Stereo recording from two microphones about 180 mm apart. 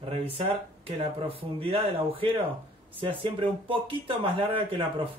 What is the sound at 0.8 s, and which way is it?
Speech, 30° right (ahead or behind).